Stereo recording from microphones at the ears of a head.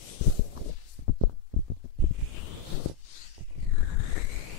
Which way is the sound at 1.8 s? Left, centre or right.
Left.